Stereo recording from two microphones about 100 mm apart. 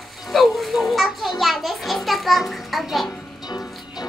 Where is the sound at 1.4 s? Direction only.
Centre (ahead or behind).